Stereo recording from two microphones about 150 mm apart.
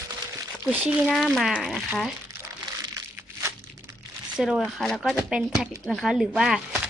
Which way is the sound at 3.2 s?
20° right (ahead or behind).